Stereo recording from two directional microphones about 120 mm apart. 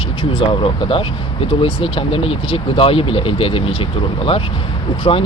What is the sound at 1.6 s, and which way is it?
Speech, 50° left (ahead or behind).